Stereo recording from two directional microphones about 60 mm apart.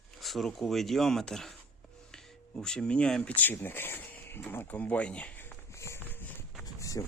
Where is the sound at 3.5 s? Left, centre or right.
Left.